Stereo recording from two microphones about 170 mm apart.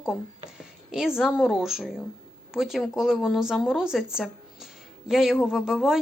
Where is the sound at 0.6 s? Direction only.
5° right (ahead or behind).